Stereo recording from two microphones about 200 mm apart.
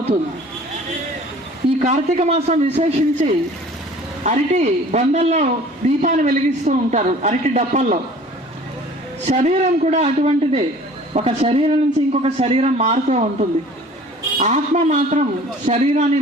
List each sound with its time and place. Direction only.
1.8 s speech: 35° right (ahead or behind)
9.2 s speech: 35° right (ahead or behind)